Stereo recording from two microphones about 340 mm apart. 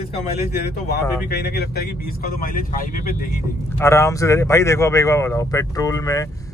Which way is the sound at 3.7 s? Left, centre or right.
Centre.